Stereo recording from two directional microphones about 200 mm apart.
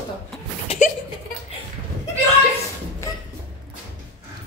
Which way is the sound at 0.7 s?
40° left (ahead or behind).